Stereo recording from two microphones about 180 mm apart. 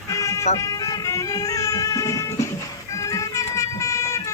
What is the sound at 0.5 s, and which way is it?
Speech, 20° left (ahead or behind).